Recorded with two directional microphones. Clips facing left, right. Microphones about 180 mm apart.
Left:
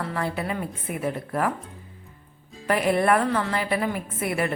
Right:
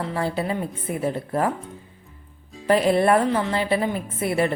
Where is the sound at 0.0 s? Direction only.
25° right (ahead or behind).